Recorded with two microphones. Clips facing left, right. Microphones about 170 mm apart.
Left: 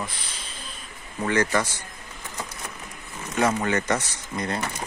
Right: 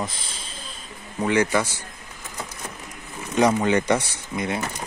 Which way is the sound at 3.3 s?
15° right (ahead or behind).